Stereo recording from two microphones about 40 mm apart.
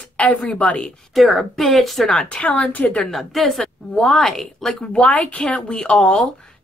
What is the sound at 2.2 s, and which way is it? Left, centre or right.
Speech, left.